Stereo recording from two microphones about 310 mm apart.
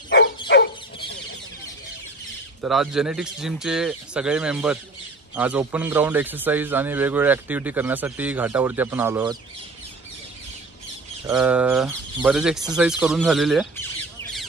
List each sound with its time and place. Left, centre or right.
0.5 s chicken: left
2.6 s a man's voice: centre
11.2 s a man's voice: centre